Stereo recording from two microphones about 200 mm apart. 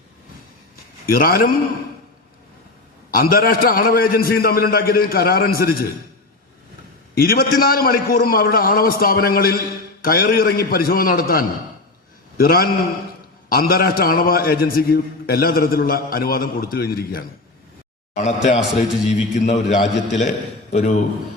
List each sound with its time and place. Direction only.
1.0 s a man's voice: 45° left (ahead or behind)
3.1 s a man's voice: 45° left (ahead or behind)
7.2 s a man's voice: 50° left (ahead or behind)
18.2 s a man's voice: 35° left (ahead or behind)